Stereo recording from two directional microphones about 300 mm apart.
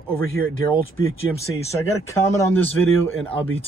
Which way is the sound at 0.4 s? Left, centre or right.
Right.